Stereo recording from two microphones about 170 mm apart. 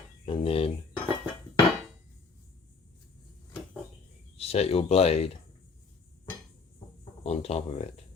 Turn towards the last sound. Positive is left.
turn(degrees=35)  # may be behind; listen again after turning